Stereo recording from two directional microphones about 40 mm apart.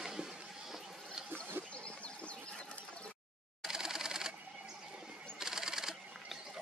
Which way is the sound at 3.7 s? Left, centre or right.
Centre.